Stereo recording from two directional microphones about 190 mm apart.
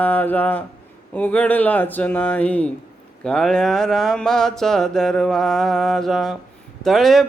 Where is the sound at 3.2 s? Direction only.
5° left (ahead or behind).